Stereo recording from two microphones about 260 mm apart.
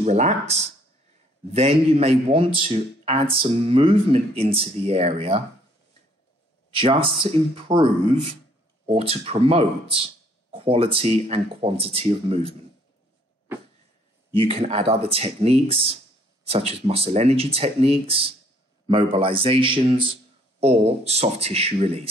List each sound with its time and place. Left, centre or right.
0.0 s a man's voice: right
6.7 s a man's voice: centre
14.3 s a man's voice: right